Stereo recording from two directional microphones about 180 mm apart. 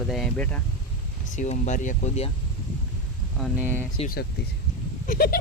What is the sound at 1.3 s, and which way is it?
Speech, 40° left (ahead or behind).